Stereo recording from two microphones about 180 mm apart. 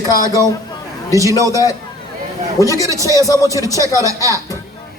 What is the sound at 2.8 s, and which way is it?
Speech, 15° right (ahead or behind).